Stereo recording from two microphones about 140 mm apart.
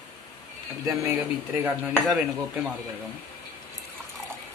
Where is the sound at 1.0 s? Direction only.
15° right (ahead or behind).